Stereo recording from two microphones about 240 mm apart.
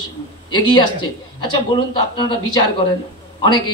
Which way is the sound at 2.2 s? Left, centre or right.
Centre.